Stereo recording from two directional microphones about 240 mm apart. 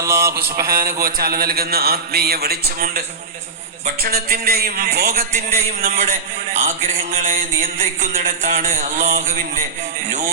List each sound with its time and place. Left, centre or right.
0.0 s a sound: centre
0.6 s a man's voice: right
4.0 s a man's voice: right
5.5 s mantra: right